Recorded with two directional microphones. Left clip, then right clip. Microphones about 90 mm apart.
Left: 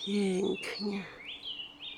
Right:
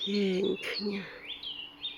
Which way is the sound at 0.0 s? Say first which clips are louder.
Right 2 dB; 5° left (ahead or behind).